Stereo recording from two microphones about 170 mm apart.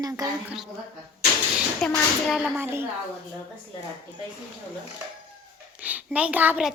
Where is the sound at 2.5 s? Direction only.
15° right (ahead or behind).